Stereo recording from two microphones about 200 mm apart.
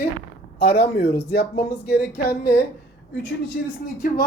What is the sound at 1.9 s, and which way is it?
Speech, 55° left (ahead or behind).